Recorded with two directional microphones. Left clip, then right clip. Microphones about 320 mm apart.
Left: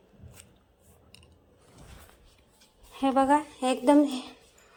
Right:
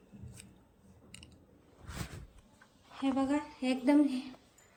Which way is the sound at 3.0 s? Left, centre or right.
Left.